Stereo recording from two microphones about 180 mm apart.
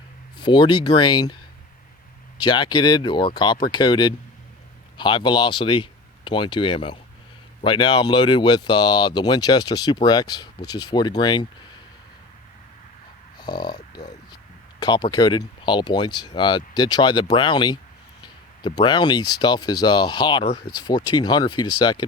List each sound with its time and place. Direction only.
0.3 s speech: 25° left (ahead or behind)
2.4 s speech: 25° left (ahead or behind)
13.4 s speech: 25° left (ahead or behind)